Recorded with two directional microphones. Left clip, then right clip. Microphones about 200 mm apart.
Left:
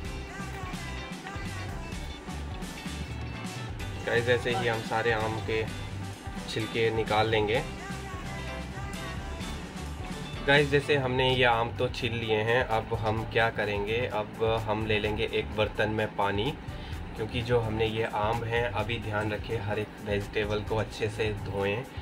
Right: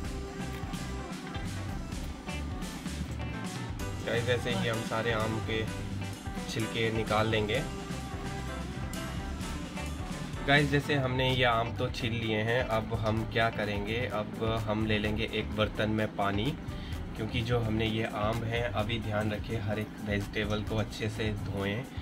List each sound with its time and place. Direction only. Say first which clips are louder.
4.1 s speech: left 5 dB; 15° left (ahead or behind)
10.4 s speech: left 3 dB; 10° left (ahead or behind)